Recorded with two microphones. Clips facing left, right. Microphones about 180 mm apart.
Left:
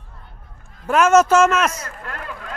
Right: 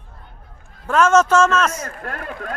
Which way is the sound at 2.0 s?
55° right (ahead or behind).